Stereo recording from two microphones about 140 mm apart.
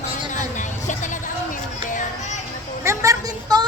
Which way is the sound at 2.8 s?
20° right (ahead or behind).